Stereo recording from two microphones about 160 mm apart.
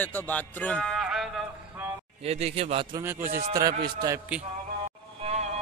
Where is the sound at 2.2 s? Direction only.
40° right (ahead or behind).